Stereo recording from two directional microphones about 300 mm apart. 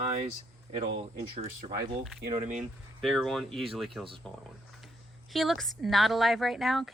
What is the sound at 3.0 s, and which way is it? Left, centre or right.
A woman's voice, centre.